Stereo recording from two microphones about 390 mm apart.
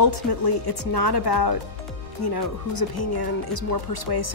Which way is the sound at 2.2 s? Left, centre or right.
Left.